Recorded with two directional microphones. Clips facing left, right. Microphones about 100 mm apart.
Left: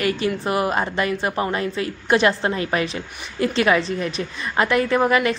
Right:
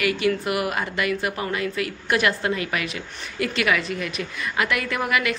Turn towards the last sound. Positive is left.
turn(degrees=30)  # may be behind; listen again after turning